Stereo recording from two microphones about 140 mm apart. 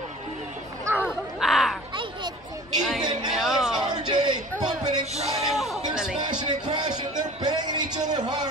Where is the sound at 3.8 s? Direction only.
30° right (ahead or behind).